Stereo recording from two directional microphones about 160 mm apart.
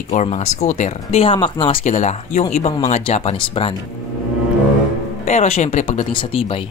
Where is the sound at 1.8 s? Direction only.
45° left (ahead or behind).